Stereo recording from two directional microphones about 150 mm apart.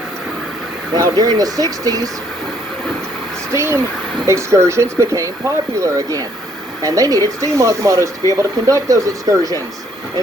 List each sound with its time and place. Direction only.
0.9 s speech: 25° right (ahead or behind)
3.5 s speech: 20° right (ahead or behind)